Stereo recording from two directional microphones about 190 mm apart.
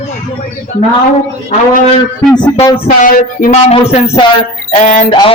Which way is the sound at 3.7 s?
35° left (ahead or behind).